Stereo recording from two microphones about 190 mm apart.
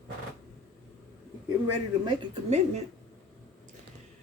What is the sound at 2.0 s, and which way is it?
Speech, 35° right (ahead or behind).